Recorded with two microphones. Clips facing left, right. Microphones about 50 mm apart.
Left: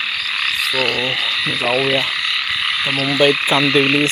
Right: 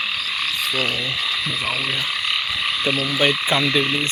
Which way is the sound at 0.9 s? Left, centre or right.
Left.